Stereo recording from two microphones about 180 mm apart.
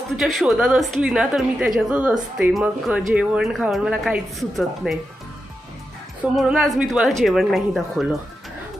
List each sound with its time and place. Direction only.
0.2 s speech: centre (ahead or behind)
6.3 s speech: centre (ahead or behind)